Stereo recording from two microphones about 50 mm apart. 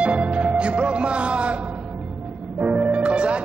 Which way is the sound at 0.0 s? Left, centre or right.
Right.